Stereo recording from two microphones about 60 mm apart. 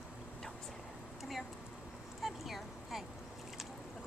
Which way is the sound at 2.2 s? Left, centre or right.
Centre.